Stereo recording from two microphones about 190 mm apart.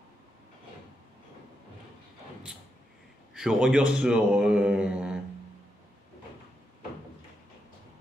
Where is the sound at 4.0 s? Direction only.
5° right (ahead or behind).